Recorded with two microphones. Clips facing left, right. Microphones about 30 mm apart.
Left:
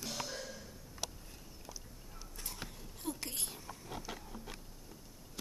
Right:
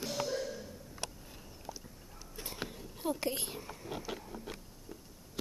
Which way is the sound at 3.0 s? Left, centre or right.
Centre.